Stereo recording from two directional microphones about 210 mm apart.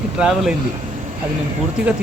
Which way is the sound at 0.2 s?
Centre (ahead or behind).